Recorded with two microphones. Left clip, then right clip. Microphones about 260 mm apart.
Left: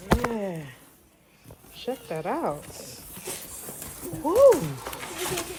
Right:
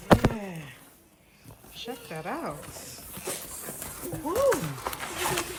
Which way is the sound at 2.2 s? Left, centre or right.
Left.